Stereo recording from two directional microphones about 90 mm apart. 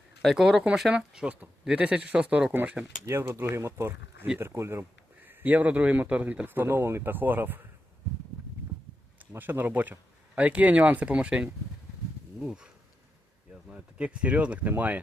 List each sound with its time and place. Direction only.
0.2 s speech: centre (ahead or behind); by 7.6 s 20° right (ahead or behind)
9.3 s speech: 20° right (ahead or behind)
13.7 s speech: 10° right (ahead or behind)